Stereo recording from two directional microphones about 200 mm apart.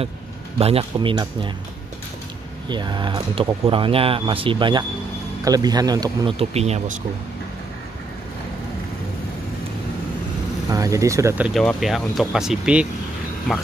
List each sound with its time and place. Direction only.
0.6 s speech: 30° right (ahead or behind)
2.7 s speech: 20° right (ahead or behind)
10.7 s speech: 15° right (ahead or behind)